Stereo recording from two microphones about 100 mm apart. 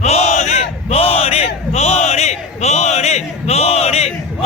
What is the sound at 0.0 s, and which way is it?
Battle cry, 90° left.